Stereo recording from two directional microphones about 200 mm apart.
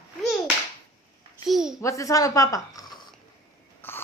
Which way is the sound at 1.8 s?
15° left (ahead or behind).